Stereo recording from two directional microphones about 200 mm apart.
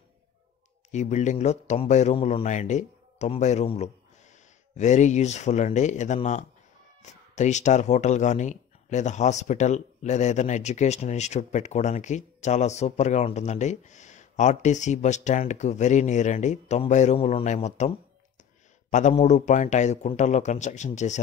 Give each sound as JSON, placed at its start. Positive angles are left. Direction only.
{"t": 0.9, "sound": "speech", "side_deg": 35}